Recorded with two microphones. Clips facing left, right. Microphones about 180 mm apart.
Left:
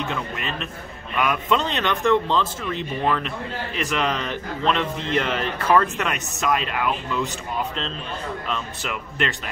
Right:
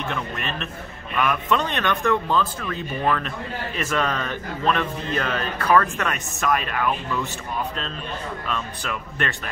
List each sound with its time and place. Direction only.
0.1 s a man's voice: 15° left (ahead or behind)
8.5 s a man's voice: 20° left (ahead or behind)